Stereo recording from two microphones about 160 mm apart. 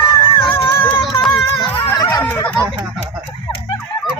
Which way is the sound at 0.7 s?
35° left (ahead or behind).